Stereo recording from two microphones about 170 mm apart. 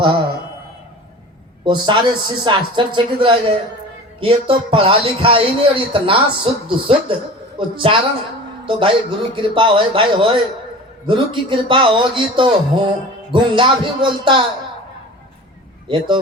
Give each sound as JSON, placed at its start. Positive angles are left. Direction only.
{"t": 1.6, "sound": "a man's voice", "side_deg": -25}
{"t": 15.9, "sound": "a man's voice", "side_deg": -30}